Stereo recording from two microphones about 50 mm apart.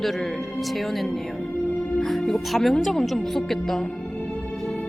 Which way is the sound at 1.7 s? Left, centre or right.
Left.